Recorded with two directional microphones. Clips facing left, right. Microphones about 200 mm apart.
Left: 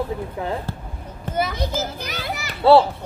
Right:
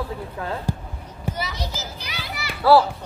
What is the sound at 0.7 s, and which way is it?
Basketball bounce, 15° right (ahead or behind).